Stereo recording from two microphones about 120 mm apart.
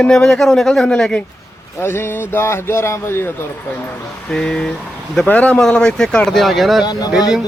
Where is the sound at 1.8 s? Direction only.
20° left (ahead or behind).